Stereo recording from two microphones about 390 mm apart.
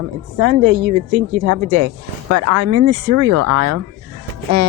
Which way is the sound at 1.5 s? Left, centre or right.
Right.